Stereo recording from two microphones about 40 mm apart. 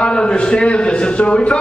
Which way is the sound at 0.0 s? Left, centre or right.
Left.